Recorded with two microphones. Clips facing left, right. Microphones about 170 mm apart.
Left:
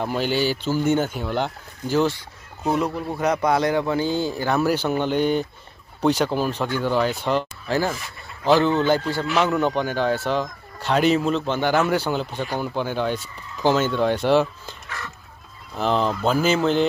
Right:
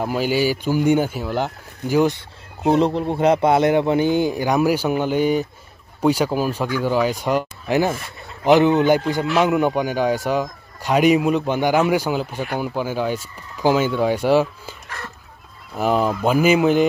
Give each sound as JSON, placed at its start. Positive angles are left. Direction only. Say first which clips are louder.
{"t": 0.0, "sound": "speech", "louder": "right 3 dB", "side_deg": -5}
{"t": 2.6, "sound": "a man's voice", "louder": "right 6 dB", "side_deg": -25}